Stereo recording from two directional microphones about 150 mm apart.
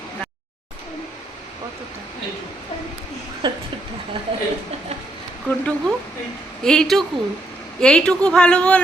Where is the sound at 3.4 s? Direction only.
30° right (ahead or behind).